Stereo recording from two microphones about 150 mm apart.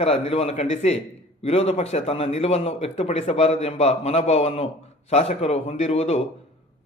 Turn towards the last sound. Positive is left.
turn(degrees=45)  # may be behind; listen again after turning